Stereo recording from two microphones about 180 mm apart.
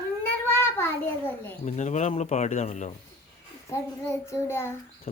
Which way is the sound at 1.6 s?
40° left (ahead or behind).